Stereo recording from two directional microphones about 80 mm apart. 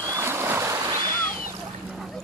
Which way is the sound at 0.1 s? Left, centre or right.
Right.